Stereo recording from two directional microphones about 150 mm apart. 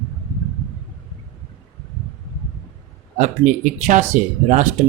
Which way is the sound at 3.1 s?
55° right (ahead or behind).